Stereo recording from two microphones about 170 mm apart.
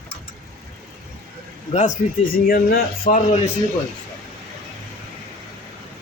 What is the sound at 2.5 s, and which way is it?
Speech, 55° left (ahead or behind).